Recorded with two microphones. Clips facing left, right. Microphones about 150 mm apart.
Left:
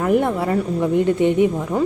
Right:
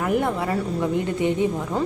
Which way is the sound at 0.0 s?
20° left (ahead or behind).